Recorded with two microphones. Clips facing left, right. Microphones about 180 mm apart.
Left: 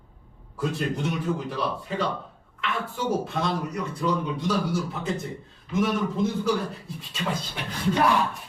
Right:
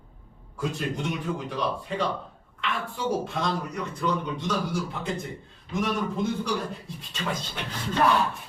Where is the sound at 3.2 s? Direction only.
Centre (ahead or behind).